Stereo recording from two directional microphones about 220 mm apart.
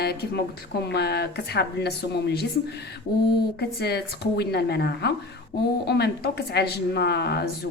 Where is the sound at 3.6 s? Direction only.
45° left (ahead or behind).